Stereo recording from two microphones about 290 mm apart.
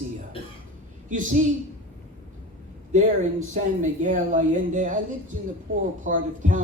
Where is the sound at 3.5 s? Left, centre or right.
Right.